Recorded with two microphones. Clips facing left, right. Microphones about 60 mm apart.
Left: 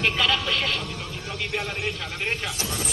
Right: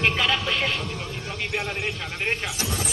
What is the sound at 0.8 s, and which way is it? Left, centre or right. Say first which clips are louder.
Vehicle: right 2 dB; centre.